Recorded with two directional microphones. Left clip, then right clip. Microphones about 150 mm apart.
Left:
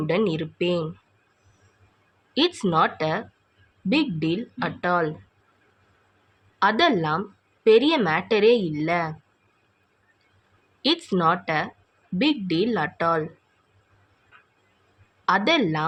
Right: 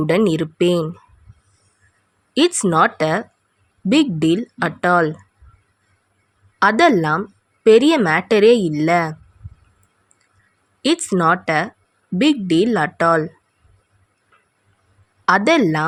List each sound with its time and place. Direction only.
0.0 s a woman's voice: 60° right (ahead or behind)
2.3 s a woman's voice: 55° right (ahead or behind)
6.6 s a woman's voice: 55° right (ahead or behind)
10.8 s a woman's voice: 50° right (ahead or behind)
15.3 s a woman's voice: 55° right (ahead or behind)